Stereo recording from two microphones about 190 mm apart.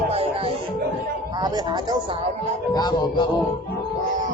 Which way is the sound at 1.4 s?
20° right (ahead or behind).